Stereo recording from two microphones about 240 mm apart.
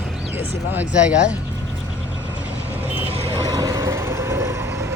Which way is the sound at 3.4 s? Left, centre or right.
Centre.